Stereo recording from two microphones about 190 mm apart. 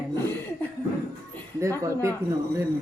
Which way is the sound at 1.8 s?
15° right (ahead or behind).